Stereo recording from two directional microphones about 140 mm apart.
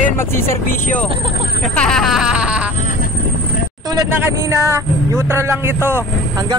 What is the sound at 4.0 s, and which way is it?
Speech, 20° right (ahead or behind).